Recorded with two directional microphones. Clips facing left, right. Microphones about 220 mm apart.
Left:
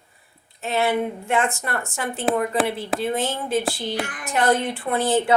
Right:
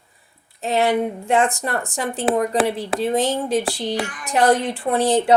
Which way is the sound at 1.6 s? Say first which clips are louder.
Right 3 dB; 35° right (ahead or behind).